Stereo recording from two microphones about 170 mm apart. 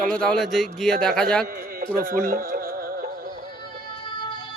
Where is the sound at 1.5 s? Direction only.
60° right (ahead or behind).